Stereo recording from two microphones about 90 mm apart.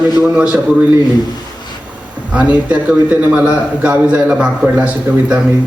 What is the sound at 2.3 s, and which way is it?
A man's voice, 15° right (ahead or behind).